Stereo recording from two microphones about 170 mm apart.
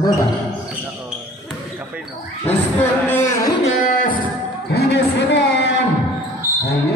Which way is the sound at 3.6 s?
50° left (ahead or behind).